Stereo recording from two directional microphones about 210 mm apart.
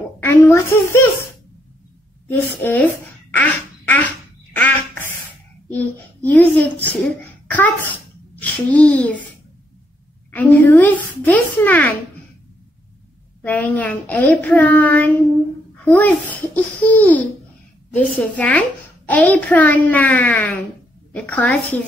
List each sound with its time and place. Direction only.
0.2 s a woman's voice: 15° left (ahead or behind)
2.2 s speech: 10° left (ahead or behind)
4.6 s duck: 10° left (ahead or behind)
5.7 s a child's voice: 10° left (ahead or behind)
10.3 s a child's voice: 10° left (ahead or behind)
13.4 s a child's voice: 10° left (ahead or behind)